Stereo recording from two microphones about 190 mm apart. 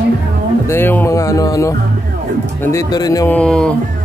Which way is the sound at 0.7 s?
10° left (ahead or behind).